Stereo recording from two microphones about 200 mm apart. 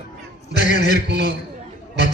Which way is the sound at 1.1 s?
60° right (ahead or behind).